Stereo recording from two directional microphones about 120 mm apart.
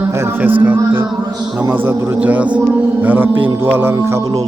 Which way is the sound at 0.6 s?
15° right (ahead or behind).